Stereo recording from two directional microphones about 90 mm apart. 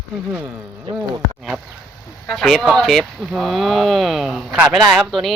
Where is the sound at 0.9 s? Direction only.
65° right (ahead or behind).